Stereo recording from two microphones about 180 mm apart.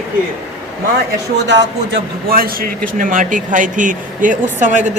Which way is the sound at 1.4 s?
75° right (ahead or behind).